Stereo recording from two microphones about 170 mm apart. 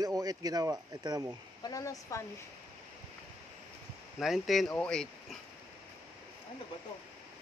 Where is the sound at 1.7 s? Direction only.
20° left (ahead or behind).